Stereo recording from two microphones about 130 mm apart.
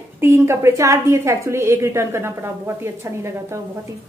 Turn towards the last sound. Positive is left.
turn(degrees=-20)  # may be behind; listen again after turning